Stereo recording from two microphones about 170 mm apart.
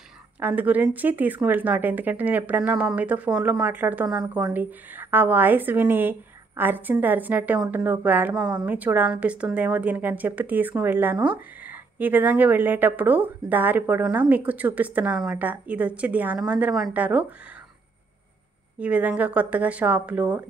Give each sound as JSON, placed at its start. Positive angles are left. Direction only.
{"t": 0.4, "sound": "a woman's voice", "side_deg": -10}
{"t": 18.8, "sound": "a woman's voice", "side_deg": -10}